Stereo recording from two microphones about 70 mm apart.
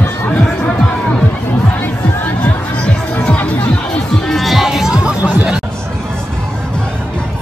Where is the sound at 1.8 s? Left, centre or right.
Left.